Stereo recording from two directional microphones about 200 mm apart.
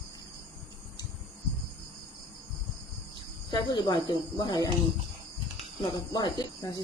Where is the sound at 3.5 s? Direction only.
20° left (ahead or behind).